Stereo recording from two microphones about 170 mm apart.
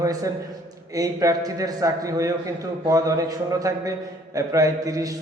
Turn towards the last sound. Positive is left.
turn(degrees=-20)  # may be behind; listen again after turning